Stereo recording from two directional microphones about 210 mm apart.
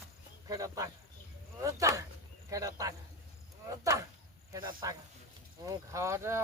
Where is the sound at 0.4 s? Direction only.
15° right (ahead or behind).